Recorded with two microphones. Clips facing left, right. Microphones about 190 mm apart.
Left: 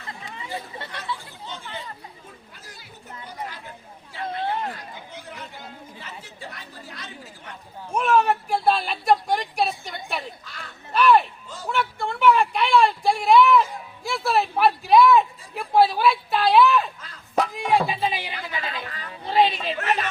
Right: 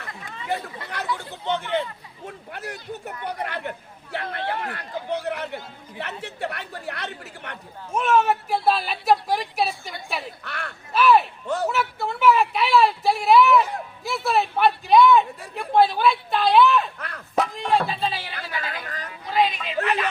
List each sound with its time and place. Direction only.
1.2 s speech: 70° right (ahead or behind)
7.9 s a woman's voice: centre (ahead or behind)
10.4 s speech: 65° right (ahead or behind)
10.9 s a woman's voice: 5° right (ahead or behind)
11.4 s speech: 65° right (ahead or behind)
11.7 s a woman's voice: 5° right (ahead or behind)
17.0 s a sound: 65° right (ahead or behind)
17.3 s speech: 5° left (ahead or behind)
18.4 s chatter: 20° left (ahead or behind)
19.2 s a sound: 30° left (ahead or behind)
19.8 s speech: 35° left (ahead or behind)